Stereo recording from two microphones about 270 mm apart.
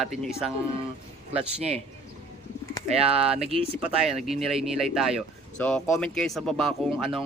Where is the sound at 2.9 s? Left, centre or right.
Right.